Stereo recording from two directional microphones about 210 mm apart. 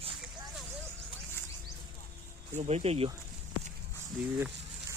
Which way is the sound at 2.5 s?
30° right (ahead or behind).